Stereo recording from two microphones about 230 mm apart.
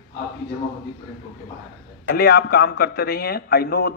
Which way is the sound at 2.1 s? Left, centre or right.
Left.